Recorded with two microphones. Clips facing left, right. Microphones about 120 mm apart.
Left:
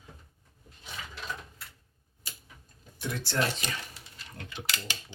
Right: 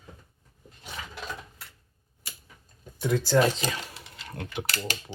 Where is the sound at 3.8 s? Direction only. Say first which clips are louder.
Right 5 dB; 90° right; by 4.9 s 60° right (ahead or behind).